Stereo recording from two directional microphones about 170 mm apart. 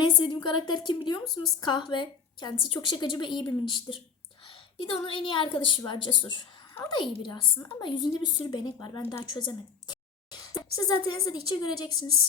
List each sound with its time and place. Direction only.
0.0 s a woman's voice: 25° left (ahead or behind)
9.0 s a woman's voice: 15° left (ahead or behind)
9.3 s a woman's voice: 25° left (ahead or behind)